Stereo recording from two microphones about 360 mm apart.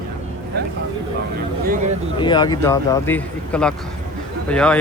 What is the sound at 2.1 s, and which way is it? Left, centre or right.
Speech, centre.